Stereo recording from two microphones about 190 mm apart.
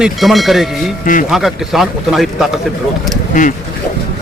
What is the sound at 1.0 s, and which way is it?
Speech, 45° left (ahead or behind).